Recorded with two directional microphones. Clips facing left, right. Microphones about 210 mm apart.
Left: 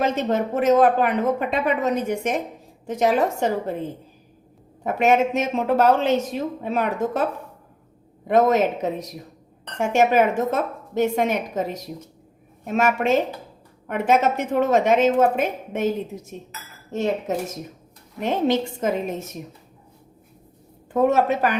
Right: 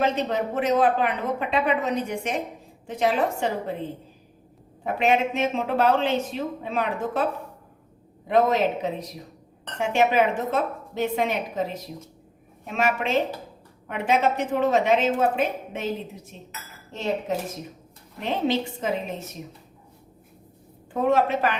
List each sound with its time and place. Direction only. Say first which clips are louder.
0.0 s speech: left 2 dB; 45° left (ahead or behind)
4.8 s speech: left 4 dB; 45° left (ahead or behind)
8.3 s speech: left 3 dB; 45° left (ahead or behind)
16.9 s speech: left 3 dB; 45° left (ahead or behind)
20.9 s a woman's voice: left 3 dB; 40° left (ahead or behind)